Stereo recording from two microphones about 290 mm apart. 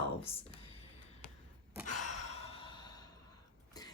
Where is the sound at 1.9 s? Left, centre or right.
Left.